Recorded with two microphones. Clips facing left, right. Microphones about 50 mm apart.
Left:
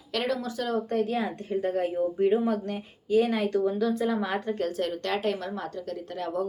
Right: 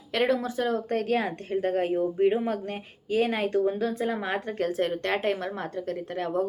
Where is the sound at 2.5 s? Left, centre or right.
Right.